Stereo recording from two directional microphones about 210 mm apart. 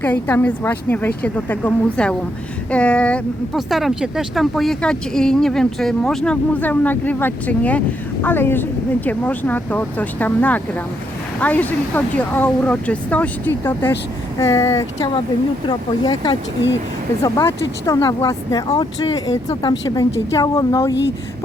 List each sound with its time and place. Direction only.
0.0 s speech: 10° left (ahead or behind)
15.6 s speech: 20° left (ahead or behind)